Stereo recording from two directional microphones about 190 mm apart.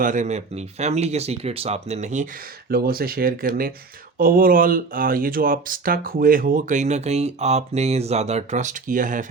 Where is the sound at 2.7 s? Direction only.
55° right (ahead or behind).